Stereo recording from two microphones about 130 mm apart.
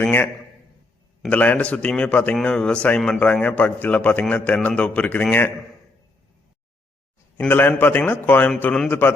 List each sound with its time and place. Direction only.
0.0 s a sound: 15° left (ahead or behind)
1.3 s a man's voice: 10° left (ahead or behind)
7.3 s a man's voice: 15° left (ahead or behind)